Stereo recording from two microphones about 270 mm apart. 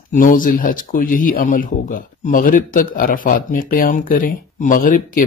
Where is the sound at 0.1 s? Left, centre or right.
Left.